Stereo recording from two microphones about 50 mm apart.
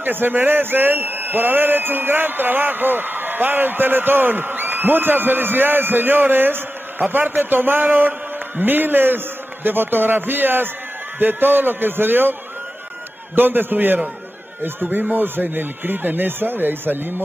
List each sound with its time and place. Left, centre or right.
0.0 s a man's voice: right